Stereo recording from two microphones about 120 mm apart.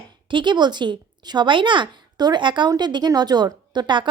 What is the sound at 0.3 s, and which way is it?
A woman's voice, 40° right (ahead or behind).